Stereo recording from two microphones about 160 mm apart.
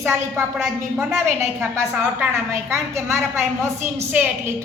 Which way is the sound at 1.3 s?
15° right (ahead or behind).